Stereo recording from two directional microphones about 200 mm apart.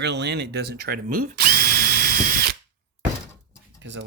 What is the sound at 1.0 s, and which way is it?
Drill, 40° right (ahead or behind).